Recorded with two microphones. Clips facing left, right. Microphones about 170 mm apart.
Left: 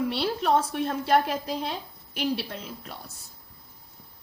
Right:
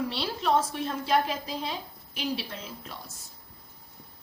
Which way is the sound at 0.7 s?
55° left (ahead or behind).